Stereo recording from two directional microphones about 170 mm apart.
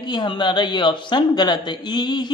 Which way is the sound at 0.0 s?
25° left (ahead or behind).